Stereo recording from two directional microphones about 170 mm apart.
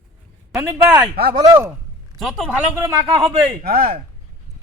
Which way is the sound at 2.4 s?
15° right (ahead or behind).